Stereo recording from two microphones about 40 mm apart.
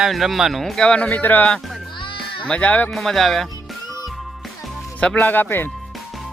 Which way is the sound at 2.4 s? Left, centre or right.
Left.